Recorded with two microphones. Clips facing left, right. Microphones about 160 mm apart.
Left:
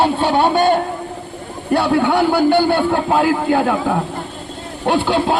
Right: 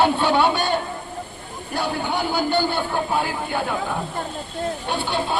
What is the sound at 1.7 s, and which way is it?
Speech, 70° left (ahead or behind).